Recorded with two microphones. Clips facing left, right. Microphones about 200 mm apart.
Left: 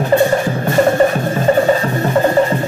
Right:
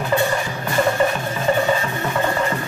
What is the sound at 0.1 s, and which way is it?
Music, 35° left (ahead or behind).